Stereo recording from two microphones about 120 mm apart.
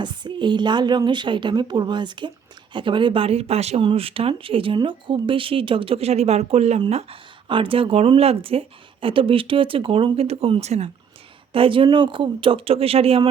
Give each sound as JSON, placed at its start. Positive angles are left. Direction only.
{"t": 0.0, "sound": "a woman's voice", "side_deg": -40}
{"t": 6.9, "sound": "speech", "side_deg": -50}
{"t": 11.5, "sound": "speech", "side_deg": -45}